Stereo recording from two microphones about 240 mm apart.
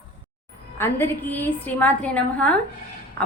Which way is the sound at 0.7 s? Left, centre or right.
Centre.